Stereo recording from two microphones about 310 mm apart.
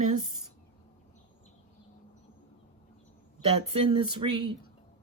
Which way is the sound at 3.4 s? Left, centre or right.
Centre.